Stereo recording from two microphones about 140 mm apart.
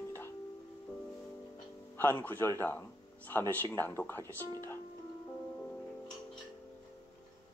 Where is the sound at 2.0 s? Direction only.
15° left (ahead or behind).